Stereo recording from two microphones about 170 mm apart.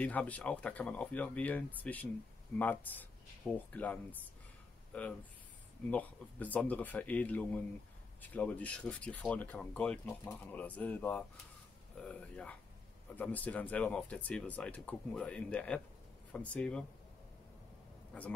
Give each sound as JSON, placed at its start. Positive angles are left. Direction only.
{"t": 0.0, "sound": "speech", "side_deg": 10}